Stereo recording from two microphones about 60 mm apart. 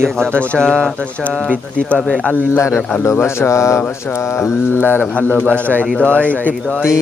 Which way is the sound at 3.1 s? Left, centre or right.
Left.